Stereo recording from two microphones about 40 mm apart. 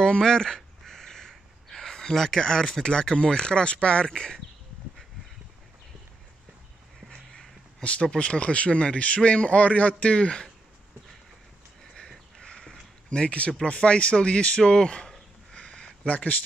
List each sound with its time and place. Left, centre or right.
0.0 s speech: centre
0.8 s crow: centre
1.3 s speech: centre
7.8 s a man's voice: left
12.4 s a sound: centre
13.1 s a man's voice: left
15.5 s a sound: left